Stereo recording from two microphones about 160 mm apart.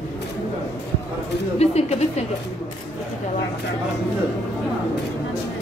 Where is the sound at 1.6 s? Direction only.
40° left (ahead or behind).